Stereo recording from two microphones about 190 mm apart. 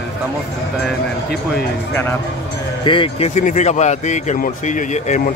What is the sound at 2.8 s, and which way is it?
Speech, 25° left (ahead or behind).